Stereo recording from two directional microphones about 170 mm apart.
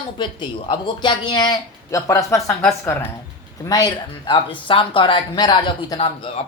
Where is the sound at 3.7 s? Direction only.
25° left (ahead or behind).